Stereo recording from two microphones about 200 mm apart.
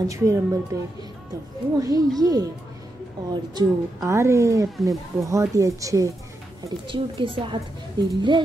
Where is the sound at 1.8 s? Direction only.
20° right (ahead or behind).